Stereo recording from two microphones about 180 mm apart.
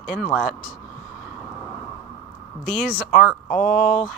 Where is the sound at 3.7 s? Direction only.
45° left (ahead or behind).